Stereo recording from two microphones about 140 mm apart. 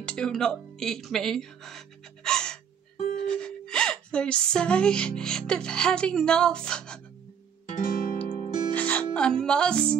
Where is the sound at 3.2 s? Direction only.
5° left (ahead or behind).